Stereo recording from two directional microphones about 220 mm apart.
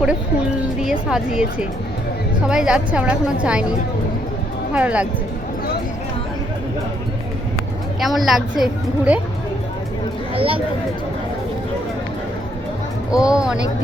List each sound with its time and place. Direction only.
0.8 s a woman's voice: centre (ahead or behind)
8.0 s a woman's voice: centre (ahead or behind)
10.3 s speech: 25° right (ahead or behind)
13.1 s a woman's voice: 5° right (ahead or behind)